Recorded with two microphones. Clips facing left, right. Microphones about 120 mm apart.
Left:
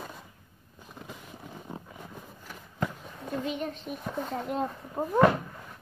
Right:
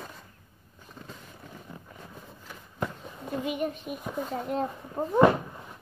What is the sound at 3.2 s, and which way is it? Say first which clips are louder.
Speech: right 2 dB; 10° right (ahead or behind).